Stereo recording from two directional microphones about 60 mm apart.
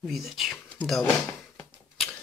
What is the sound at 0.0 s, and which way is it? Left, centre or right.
Speech, centre.